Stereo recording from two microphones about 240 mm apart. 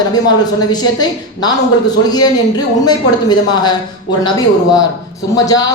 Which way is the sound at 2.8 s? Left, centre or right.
Centre.